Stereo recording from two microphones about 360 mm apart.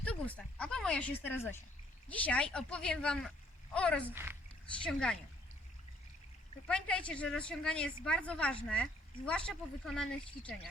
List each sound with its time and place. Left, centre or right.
0.0 s speech: centre
6.7 s speech: centre